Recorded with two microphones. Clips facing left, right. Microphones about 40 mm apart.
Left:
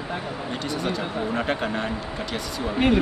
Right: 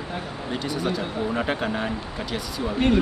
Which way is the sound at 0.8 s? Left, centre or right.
Centre.